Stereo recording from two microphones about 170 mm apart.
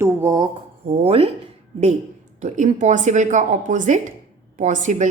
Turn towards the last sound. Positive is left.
turn(degrees=-45)  # may be behind; listen again after turning